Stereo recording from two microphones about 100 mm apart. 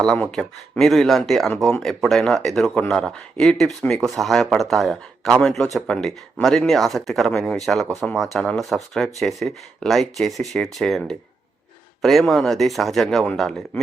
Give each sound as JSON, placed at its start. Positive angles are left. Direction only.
{"t": 0.0, "sound": "speech", "side_deg": 10}